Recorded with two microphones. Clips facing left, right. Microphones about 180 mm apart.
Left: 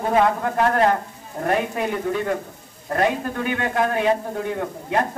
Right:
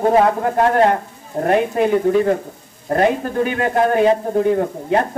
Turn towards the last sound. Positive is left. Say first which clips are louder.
# right 6 dB
turn(degrees=-35)  # may be behind; listen again after turning